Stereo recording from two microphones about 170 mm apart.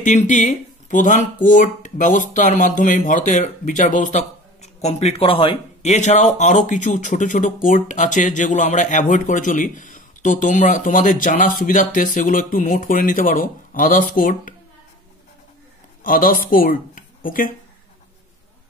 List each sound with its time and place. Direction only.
0.0 s speech: 45° left (ahead or behind)
16.0 s speech: 55° left (ahead or behind)